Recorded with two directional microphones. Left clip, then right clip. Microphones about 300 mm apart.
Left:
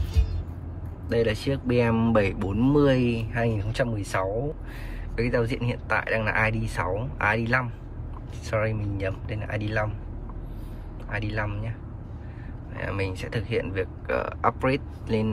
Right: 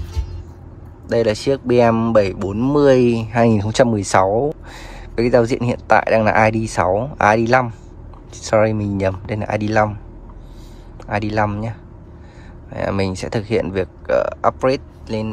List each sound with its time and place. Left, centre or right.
1.0 s speech: centre
5.1 s speech: centre
11.1 s speech: centre
12.7 s speech: centre